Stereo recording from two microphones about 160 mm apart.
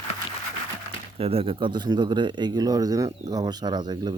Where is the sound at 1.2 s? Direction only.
40° right (ahead or behind).